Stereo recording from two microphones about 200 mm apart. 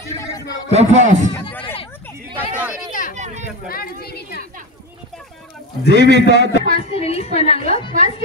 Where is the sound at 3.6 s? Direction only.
50° left (ahead or behind).